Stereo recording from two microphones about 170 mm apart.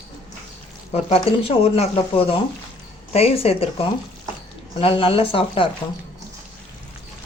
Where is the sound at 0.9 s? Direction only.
35° left (ahead or behind).